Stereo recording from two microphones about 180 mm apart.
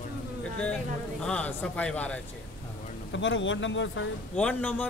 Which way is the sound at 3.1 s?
90° left.